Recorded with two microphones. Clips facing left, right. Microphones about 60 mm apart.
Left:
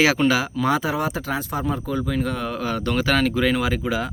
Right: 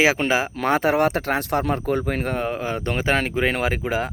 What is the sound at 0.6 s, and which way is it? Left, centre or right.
Speech, right.